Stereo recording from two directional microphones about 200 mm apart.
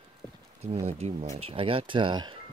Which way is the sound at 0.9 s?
30° right (ahead or behind).